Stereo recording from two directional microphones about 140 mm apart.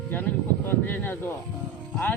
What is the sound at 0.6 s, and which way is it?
Speech, 15° left (ahead or behind).